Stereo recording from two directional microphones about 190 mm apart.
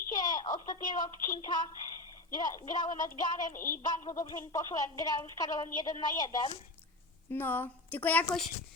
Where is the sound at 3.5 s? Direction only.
50° left (ahead or behind).